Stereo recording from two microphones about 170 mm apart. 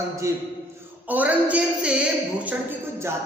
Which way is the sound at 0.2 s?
15° right (ahead or behind).